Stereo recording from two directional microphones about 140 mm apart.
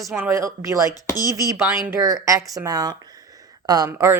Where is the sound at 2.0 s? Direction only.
25° right (ahead or behind).